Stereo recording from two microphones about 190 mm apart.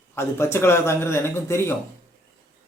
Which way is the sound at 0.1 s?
15° left (ahead or behind).